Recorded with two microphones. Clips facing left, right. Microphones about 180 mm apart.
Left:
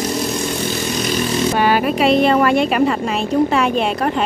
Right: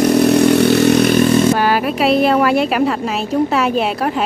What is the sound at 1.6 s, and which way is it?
A woman's voice, centre (ahead or behind).